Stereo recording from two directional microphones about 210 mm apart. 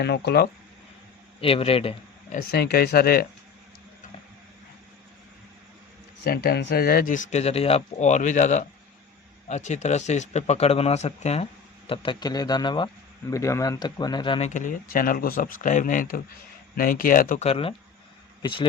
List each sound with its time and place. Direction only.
0.0 s speech: 50° left (ahead or behind)
1.4 s speech: 25° left (ahead or behind)
2.5 s speech: 50° left (ahead or behind)
6.2 s speech: 50° left (ahead or behind); by 11.4 s 30° left (ahead or behind)
11.9 s speech: 20° left (ahead or behind)